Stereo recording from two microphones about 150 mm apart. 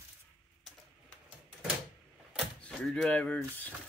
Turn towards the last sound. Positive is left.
turn(degrees=10)  # may be behind; listen again after turning